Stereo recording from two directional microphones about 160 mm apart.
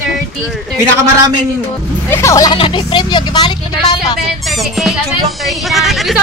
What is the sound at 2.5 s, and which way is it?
Speech, 30° left (ahead or behind).